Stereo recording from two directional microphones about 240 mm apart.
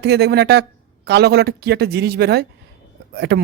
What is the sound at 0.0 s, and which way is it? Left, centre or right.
Speech, right.